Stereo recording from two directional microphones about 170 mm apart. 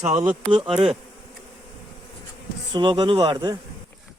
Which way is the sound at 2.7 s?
25° right (ahead or behind).